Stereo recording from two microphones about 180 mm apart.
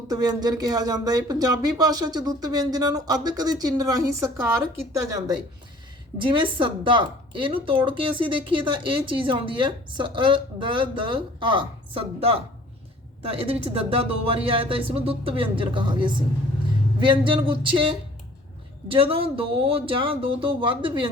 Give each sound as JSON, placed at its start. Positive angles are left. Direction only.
{"t": 0.1, "sound": "speech", "side_deg": -20}
{"t": 13.4, "sound": "speech", "side_deg": -30}